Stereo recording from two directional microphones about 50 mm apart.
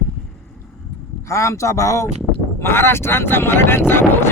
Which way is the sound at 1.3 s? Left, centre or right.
Left.